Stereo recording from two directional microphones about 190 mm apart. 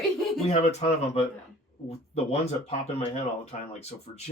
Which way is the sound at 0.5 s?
35° left (ahead or behind).